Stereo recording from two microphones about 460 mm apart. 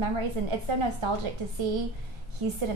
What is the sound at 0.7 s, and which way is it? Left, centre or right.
Speech, right.